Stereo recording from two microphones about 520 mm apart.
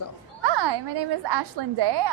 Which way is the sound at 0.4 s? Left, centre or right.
Right.